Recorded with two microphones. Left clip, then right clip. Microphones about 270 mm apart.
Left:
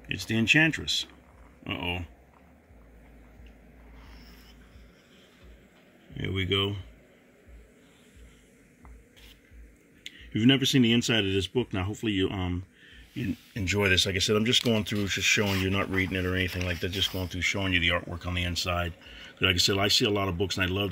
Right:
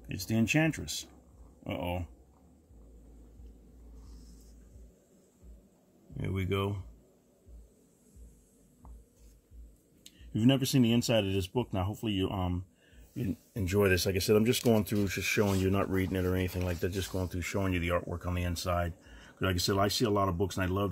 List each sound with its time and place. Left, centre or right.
0.3 s speech: centre
6.1 s speech: centre
10.3 s speech: centre